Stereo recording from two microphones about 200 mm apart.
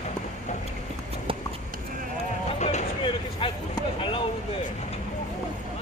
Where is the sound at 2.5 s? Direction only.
35° left (ahead or behind).